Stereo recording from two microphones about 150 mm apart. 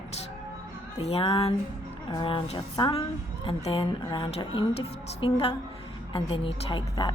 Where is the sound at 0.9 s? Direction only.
40° left (ahead or behind).